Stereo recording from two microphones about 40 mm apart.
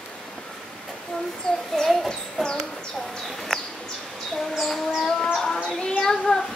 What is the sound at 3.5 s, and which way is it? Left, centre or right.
Bird, centre.